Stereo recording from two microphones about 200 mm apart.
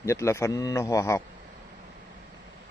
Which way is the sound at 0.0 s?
15° left (ahead or behind).